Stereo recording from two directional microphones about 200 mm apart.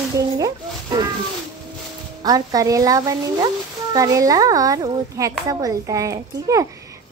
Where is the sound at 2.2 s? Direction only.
20° right (ahead or behind).